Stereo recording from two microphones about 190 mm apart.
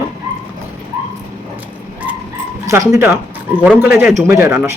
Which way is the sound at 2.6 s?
15° right (ahead or behind).